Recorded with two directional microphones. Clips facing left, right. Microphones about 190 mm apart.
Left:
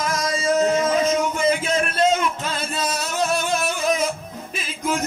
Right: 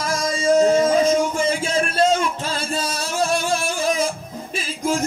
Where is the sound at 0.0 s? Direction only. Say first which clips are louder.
Right 1 dB; 30° right (ahead or behind).